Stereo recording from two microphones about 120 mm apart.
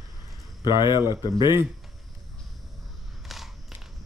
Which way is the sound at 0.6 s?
40° left (ahead or behind).